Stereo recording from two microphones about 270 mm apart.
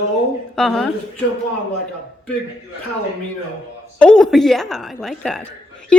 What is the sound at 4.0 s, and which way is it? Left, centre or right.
A woman's voice, centre.